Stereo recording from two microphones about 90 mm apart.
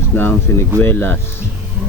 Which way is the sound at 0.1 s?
25° left (ahead or behind).